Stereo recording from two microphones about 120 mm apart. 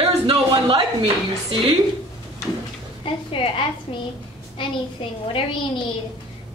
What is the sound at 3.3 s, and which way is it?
Speech, 45° left (ahead or behind).